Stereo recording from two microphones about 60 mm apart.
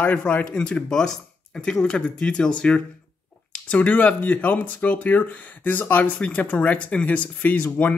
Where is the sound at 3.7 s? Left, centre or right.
Left.